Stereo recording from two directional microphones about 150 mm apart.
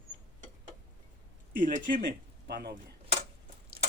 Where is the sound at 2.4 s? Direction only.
90° right.